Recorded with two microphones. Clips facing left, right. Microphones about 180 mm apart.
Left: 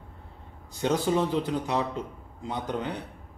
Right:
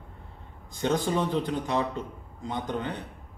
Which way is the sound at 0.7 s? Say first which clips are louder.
Left 1 dB; 5° left (ahead or behind).